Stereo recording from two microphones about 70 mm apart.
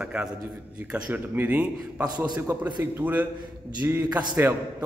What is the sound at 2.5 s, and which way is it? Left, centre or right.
A man's voice, right.